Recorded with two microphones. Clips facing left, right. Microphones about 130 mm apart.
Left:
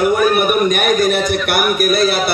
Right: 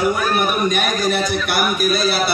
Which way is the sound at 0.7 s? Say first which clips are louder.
Left 5 dB; 55° left (ahead or behind).